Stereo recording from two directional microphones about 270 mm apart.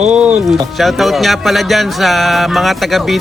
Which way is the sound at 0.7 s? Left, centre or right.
Centre.